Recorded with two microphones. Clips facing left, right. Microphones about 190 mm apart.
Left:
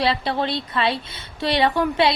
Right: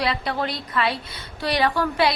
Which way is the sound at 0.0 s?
30° left (ahead or behind).